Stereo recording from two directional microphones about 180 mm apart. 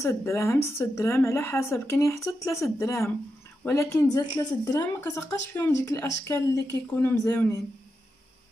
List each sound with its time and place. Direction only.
0.0 s a woman's voice: 15° left (ahead or behind)